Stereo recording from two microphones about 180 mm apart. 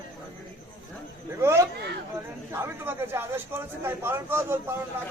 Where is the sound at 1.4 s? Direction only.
15° right (ahead or behind).